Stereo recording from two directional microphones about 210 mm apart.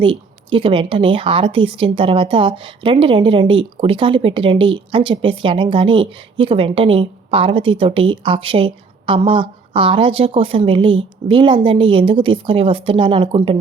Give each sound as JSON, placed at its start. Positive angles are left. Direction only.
{"t": 0.0, "sound": "speech", "side_deg": -25}